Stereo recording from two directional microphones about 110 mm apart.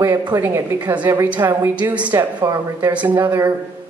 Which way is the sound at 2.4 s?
30° right (ahead or behind).